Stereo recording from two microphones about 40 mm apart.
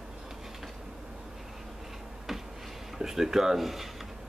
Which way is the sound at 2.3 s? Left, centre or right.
Centre.